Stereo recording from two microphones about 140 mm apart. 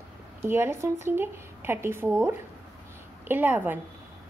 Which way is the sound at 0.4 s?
15° right (ahead or behind).